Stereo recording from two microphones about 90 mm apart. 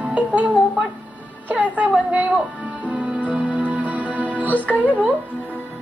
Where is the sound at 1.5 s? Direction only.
15° right (ahead or behind).